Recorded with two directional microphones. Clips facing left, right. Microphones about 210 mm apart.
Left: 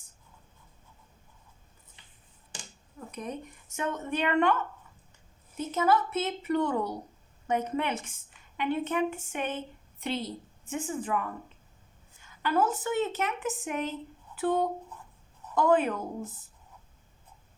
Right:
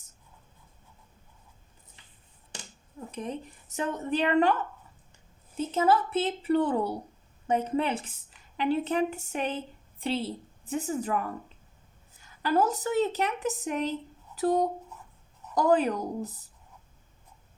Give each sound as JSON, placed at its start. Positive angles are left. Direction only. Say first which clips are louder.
{"t": 3.1, "sound": "a woman's voice", "louder": "right 2 dB", "side_deg": -30}
{"t": 5.5, "sound": "a woman's voice", "louder": "right 2 dB", "side_deg": -30}